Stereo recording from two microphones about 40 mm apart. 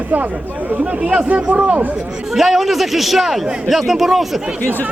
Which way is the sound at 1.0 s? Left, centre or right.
Right.